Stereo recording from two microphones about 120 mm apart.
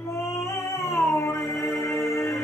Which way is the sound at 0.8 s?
25° left (ahead or behind).